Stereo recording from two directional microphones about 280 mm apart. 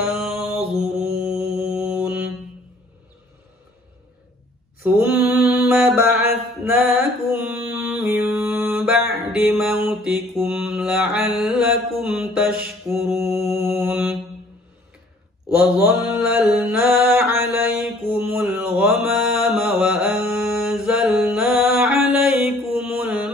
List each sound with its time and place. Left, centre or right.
0.0 s mantra: centre
4.8 s mantra: centre
5.1 s mantra: left
5.7 s mantra: centre
16.4 s mantra: centre